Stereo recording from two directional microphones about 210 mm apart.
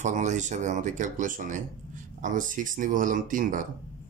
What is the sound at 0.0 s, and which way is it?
Speech, 35° right (ahead or behind).